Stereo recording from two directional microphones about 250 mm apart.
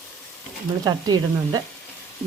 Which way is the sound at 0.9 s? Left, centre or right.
Centre.